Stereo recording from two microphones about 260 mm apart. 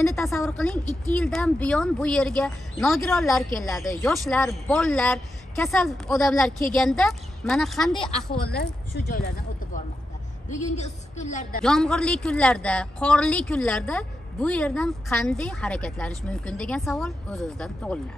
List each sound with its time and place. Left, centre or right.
0.0 s a woman's voice: centre
8.4 s speech: left
10.5 s a woman's voice: left
11.6 s a woman's voice: centre